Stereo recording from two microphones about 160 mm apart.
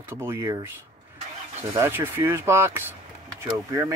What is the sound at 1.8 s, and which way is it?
Speech, 15° right (ahead or behind).